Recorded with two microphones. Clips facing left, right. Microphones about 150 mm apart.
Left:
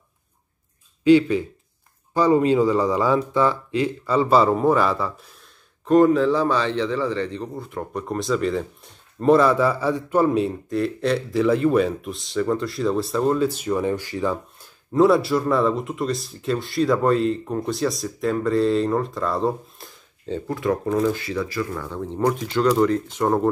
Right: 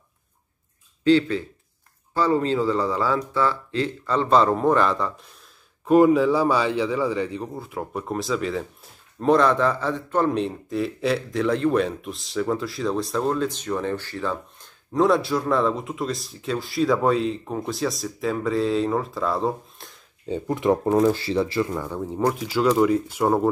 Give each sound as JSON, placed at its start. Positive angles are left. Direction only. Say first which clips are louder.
{"t": 1.0, "sound": "speech", "louder": "left 3 dB", "side_deg": 10}
{"t": 5.9, "sound": "a man's voice", "louder": "even", "side_deg": -10}
{"t": 14.9, "sound": "a man's voice", "louder": "left 3 dB", "side_deg": 0}
{"t": 20.2, "sound": "speech", "louder": "right 2 dB", "side_deg": -15}